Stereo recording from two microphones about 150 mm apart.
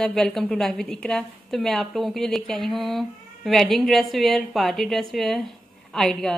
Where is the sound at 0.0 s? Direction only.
5° left (ahead or behind).